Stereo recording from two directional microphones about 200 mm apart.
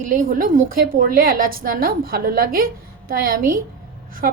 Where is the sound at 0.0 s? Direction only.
40° right (ahead or behind).